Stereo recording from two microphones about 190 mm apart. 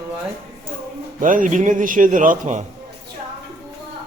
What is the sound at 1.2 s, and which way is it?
A man's voice, 45° right (ahead or behind).